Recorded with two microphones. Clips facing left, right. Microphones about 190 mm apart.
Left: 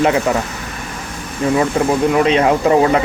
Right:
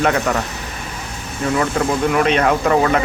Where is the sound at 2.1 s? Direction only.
25° left (ahead or behind).